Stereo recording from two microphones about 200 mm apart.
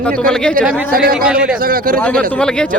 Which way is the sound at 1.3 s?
5° right (ahead or behind).